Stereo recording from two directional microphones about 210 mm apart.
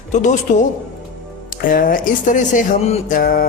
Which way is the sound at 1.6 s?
40° left (ahead or behind).